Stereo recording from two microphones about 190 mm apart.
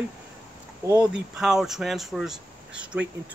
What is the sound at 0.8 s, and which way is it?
Speech, 10° right (ahead or behind).